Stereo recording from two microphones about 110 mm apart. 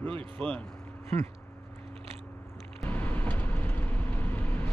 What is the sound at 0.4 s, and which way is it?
Speech, 10° left (ahead or behind).